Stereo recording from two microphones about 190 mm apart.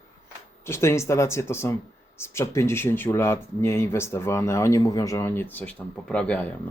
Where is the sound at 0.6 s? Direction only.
15° left (ahead or behind).